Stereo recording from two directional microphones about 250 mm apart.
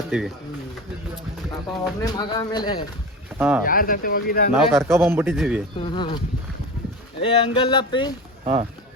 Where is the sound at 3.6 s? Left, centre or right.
Left.